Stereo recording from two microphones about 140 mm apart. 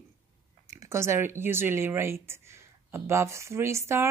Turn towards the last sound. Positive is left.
turn(degrees=-20)  # may be behind; listen again after turning